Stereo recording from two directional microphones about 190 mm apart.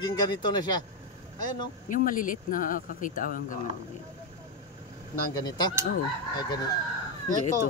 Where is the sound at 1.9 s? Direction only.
45° left (ahead or behind).